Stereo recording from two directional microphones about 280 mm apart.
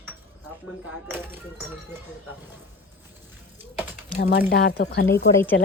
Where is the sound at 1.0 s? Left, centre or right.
Centre.